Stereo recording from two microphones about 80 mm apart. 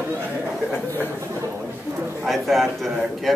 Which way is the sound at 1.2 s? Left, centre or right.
Right.